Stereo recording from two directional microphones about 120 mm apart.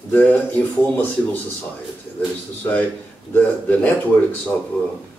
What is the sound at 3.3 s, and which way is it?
Speech, 15° left (ahead or behind).